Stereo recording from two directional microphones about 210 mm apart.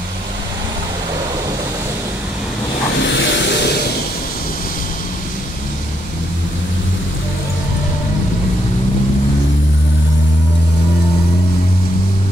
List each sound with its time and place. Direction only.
3.0 s vehicle: 55° left (ahead or behind)